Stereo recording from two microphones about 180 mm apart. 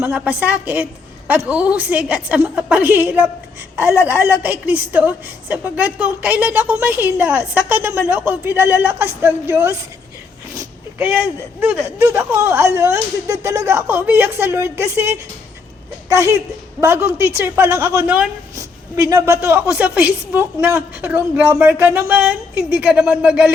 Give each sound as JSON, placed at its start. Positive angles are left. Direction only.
{"t": 0.0, "sound": "a woman's voice", "side_deg": -10}
{"t": 10.5, "sound": "a sound", "side_deg": -15}
{"t": 11.6, "sound": "a woman's voice", "side_deg": -5}